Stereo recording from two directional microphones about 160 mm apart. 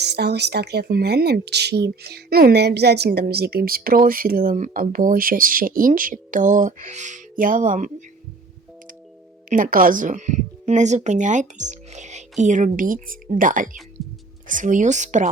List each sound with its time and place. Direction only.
0.0 s speech: 90° right; by 7.9 s 55° right (ahead or behind)
9.5 s speech: 60° right (ahead or behind)